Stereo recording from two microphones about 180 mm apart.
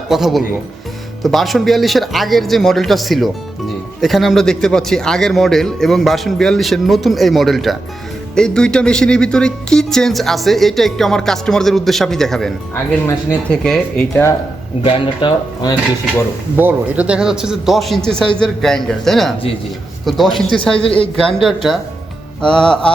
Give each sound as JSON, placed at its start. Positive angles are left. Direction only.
{"t": 0.1, "sound": "speech", "side_deg": 0}
{"t": 14.8, "sound": "speech", "side_deg": 25}
{"t": 16.6, "sound": "speech", "side_deg": -10}